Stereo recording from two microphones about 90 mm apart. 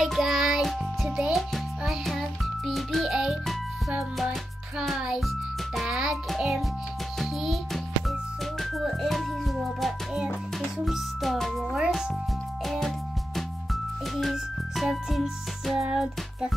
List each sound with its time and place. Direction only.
0.0 s music: centre (ahead or behind)
4.8 s a child's voice: centre (ahead or behind)
14.1 s music: centre (ahead or behind)